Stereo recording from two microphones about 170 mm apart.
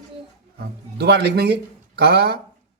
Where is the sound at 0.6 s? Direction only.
75° right (ahead or behind).